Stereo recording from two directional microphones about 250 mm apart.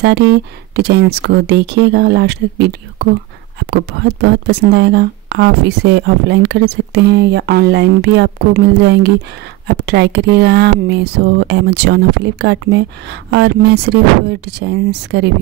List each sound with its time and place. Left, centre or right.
0.3 s speech: right